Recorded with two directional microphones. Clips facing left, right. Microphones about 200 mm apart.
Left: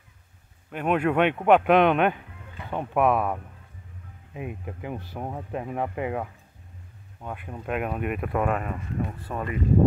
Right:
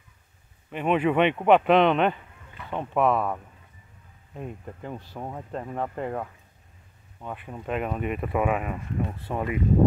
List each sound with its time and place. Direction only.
0.7 s speech: centre (ahead or behind)